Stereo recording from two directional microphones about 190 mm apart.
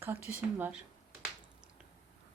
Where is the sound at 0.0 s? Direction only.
10° right (ahead or behind).